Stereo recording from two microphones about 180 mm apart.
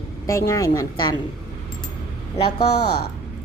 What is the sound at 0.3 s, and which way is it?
Speech, 15° left (ahead or behind).